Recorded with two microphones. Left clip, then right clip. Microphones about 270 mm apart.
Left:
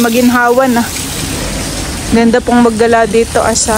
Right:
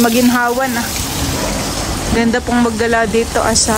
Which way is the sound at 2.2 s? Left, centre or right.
Centre.